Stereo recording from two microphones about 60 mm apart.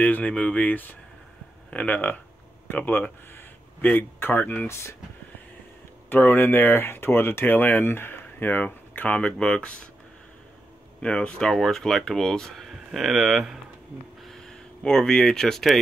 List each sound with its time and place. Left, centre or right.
0.0 s speech: left
4.6 s speech: left
6.0 s speech: left; by 9.8 s centre
11.0 s speech: centre
14.2 s speech: centre